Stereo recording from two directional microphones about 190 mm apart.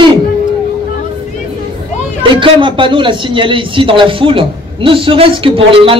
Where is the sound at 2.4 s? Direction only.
25° right (ahead or behind).